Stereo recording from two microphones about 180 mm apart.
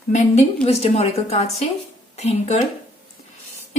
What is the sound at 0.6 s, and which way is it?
A woman's voice, 35° left (ahead or behind).